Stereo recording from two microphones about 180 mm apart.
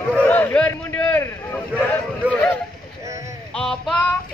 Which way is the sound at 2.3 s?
5° left (ahead or behind).